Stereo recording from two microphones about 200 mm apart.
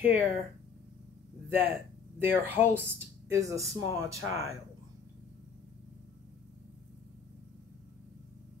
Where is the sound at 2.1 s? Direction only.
10° right (ahead or behind).